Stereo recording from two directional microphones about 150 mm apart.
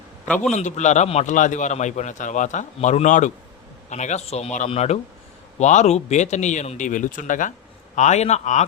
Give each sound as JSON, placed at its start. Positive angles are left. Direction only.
{"t": 0.3, "sound": "a man's voice", "side_deg": 5}
{"t": 0.5, "sound": "a man's voice", "side_deg": 50}
{"t": 7.9, "sound": "a man's voice", "side_deg": 50}